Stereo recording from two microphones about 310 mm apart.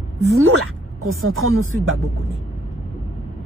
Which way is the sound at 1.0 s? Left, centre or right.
Right.